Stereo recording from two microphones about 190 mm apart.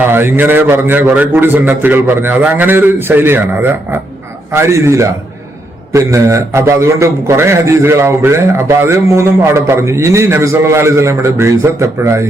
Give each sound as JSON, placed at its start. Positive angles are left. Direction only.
{"t": 0.1, "sound": "a man's voice", "side_deg": -10}